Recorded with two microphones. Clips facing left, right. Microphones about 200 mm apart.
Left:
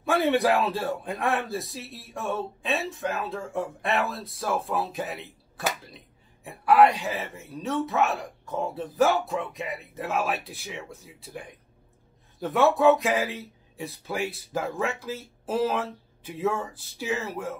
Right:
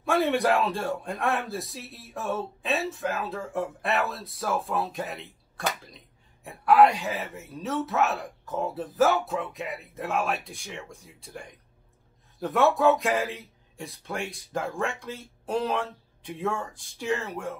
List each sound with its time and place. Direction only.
0.0 s a man's voice: centre (ahead or behind)